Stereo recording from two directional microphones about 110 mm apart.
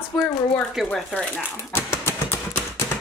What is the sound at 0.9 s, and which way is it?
Speech, 5° left (ahead or behind).